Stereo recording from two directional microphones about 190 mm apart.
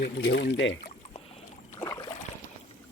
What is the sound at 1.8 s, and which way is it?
Boat, 15° left (ahead or behind).